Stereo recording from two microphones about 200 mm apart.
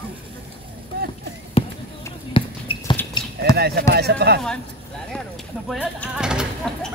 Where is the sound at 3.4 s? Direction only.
50° right (ahead or behind).